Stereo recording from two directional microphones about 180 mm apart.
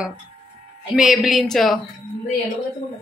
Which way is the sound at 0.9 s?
Centre (ahead or behind).